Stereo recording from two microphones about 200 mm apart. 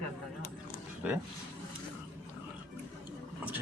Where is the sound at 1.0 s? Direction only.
5° right (ahead or behind).